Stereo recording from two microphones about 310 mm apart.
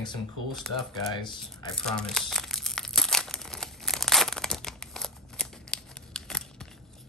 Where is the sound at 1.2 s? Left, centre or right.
Centre.